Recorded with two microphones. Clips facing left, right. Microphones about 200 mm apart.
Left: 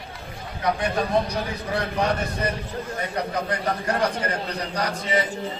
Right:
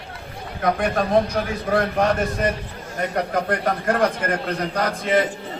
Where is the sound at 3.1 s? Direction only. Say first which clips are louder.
Right 5 dB; 50° right (ahead or behind).